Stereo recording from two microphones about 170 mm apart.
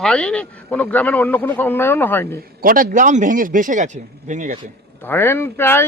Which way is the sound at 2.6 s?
55° right (ahead or behind).